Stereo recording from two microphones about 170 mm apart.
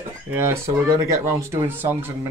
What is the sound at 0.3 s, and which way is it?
Speech, 15° right (ahead or behind).